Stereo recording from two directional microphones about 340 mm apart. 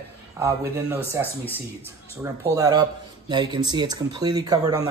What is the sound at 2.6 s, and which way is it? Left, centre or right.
Speech, centre.